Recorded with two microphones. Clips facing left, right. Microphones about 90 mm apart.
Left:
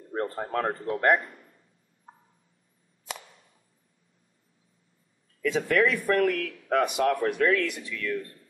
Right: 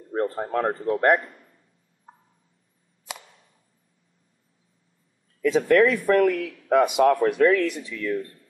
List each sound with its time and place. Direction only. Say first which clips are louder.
0.1 s speech: right 4 dB; 10° right (ahead or behind)
2.1 s turkey: right 1 dB; centre (ahead or behind)
5.6 s speech: right 6 dB; centre (ahead or behind)
7.5 s speech: right 4 dB; 35° right (ahead or behind)
7.9 s speech: right 4 dB; 20° right (ahead or behind)